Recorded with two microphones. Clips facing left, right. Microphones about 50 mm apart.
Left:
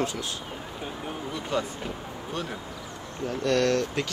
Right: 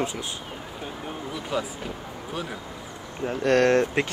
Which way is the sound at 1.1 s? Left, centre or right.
Centre.